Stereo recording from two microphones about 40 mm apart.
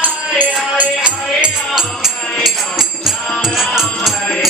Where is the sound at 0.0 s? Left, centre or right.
Right.